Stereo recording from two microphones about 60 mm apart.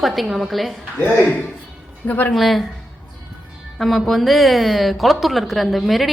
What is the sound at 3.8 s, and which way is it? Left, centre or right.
A woman's voice, centre.